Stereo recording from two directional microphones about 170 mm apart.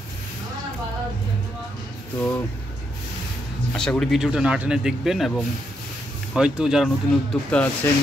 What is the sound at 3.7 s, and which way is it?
Speech, 5° left (ahead or behind).